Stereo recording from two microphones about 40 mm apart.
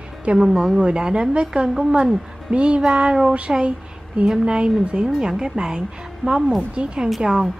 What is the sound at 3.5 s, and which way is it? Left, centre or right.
A woman's voice, centre.